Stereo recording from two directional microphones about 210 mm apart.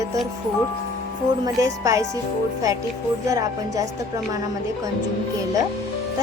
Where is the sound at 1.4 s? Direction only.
15° right (ahead or behind).